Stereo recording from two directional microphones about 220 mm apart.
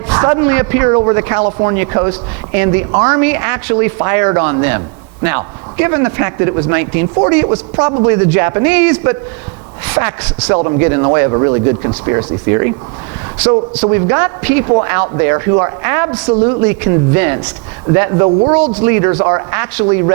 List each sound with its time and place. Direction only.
0.1 s a man's voice: 15° right (ahead or behind)
13.8 s a man's voice: 15° right (ahead or behind)